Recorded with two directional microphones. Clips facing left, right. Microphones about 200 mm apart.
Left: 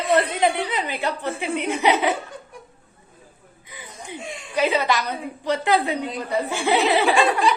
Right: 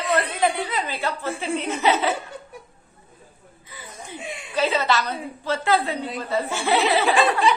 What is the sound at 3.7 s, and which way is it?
Chuckle, 15° left (ahead or behind).